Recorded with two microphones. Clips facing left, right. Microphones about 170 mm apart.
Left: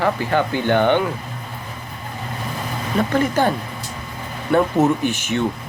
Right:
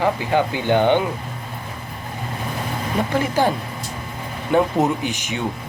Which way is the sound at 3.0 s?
10° right (ahead or behind).